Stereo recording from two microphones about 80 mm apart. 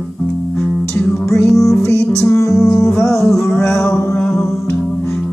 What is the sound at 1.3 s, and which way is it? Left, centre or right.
Music, left.